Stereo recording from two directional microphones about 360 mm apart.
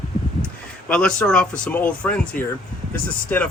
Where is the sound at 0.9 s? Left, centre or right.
Centre.